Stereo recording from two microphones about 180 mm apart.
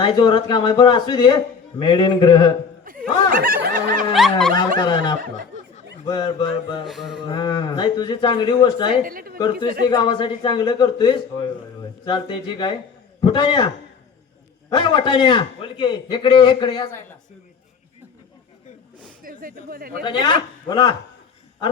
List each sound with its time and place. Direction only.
0.0 s a man's voice: 25° left (ahead or behind)
3.3 s snicker: 55° right (ahead or behind)
4.1 s a sound: centre (ahead or behind)
4.8 s a man's voice: 25° left (ahead or behind)
6.8 s a sound: centre (ahead or behind)
7.3 s a man's voice: 25° left (ahead or behind)
9.0 s a woman's voice: 55° right (ahead or behind)
9.9 s a man's voice: 25° left (ahead or behind)
14.7 s a man's voice: 25° left (ahead or behind)
19.2 s speech: 50° right (ahead or behind)
19.9 s a man's voice: 25° left (ahead or behind)